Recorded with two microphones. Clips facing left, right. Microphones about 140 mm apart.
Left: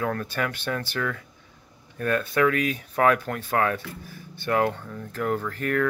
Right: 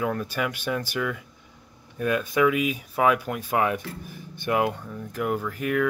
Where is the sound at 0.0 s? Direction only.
10° right (ahead or behind).